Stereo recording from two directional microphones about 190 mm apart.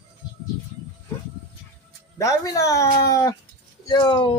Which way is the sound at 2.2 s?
15° left (ahead or behind).